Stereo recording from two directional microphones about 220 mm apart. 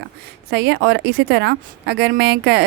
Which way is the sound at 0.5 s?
50° right (ahead or behind).